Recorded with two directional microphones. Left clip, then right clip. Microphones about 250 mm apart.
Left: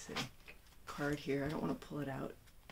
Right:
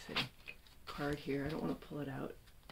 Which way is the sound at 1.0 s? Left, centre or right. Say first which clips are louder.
Left 1 dB; centre.